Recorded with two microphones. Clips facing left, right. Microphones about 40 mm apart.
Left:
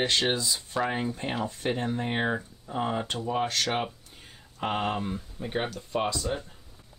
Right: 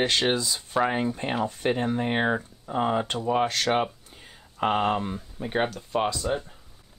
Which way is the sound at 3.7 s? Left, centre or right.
Centre.